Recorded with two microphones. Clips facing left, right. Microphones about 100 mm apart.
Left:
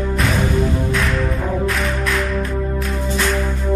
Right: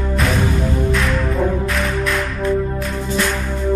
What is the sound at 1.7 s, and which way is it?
Music, centre (ahead or behind).